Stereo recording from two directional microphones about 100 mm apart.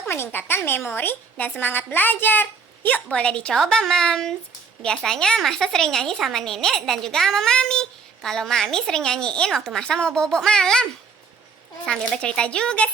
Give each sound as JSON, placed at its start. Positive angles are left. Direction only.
{"t": 0.1, "sound": "a woman's voice", "side_deg": 20}
{"t": 11.9, "sound": "speech", "side_deg": 10}